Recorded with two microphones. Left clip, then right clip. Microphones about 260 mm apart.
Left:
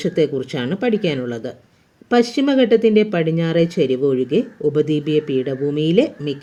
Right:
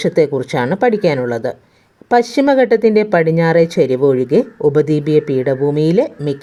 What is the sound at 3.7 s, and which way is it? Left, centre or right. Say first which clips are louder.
Speech: right 5 dB; right.